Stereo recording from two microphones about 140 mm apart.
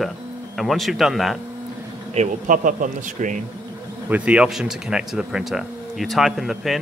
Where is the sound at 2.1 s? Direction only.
65° right (ahead or behind).